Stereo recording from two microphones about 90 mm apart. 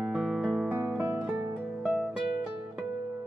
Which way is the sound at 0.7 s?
20° right (ahead or behind).